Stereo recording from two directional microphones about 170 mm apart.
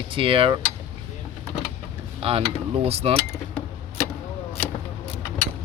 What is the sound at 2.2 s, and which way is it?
Speech, 35° right (ahead or behind).